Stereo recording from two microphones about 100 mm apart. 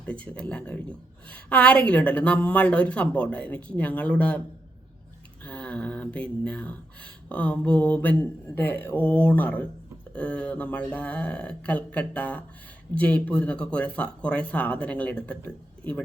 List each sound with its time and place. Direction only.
0.0 s speech: 10° left (ahead or behind)
5.4 s speech: 15° left (ahead or behind)